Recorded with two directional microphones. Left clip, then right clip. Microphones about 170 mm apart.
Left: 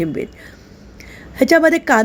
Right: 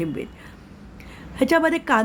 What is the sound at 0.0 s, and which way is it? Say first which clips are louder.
Speech: left 6 dB; 20° left (ahead or behind).